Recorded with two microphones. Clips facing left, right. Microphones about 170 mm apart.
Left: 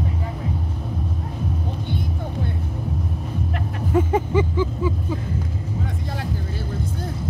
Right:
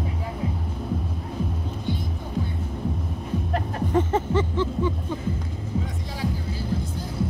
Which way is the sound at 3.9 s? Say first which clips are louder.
Left 3 dB; 10° left (ahead or behind).